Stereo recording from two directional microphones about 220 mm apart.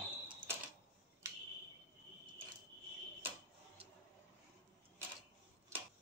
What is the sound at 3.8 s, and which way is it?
Vehicle, 25° right (ahead or behind).